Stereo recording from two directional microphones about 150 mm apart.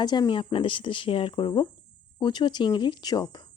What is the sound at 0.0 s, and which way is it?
Speech, 30° left (ahead or behind).